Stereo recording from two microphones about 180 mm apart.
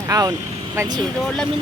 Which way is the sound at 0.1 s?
20° right (ahead or behind).